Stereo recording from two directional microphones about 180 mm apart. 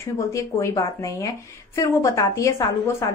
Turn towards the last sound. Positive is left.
turn(degrees=15)  # may be behind; listen again after turning